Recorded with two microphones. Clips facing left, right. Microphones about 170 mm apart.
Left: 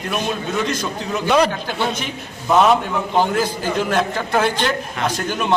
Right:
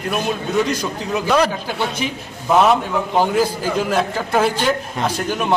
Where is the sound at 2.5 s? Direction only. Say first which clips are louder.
Even; 5° right (ahead or behind).